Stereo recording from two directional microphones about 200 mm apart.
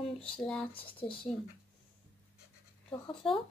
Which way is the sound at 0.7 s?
25° left (ahead or behind).